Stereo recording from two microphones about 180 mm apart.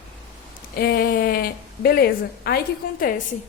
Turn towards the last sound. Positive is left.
turn(degrees=50)  # may be behind; listen again after turning